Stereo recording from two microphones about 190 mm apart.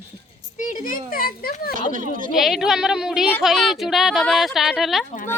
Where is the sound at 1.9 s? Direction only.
45° right (ahead or behind).